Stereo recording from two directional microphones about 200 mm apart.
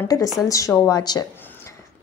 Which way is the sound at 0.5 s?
15° left (ahead or behind).